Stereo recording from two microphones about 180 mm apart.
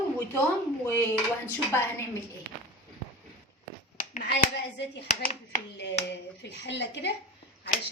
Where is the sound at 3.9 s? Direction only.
45° left (ahead or behind).